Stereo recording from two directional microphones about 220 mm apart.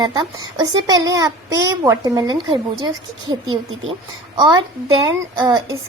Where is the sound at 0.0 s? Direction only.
20° right (ahead or behind).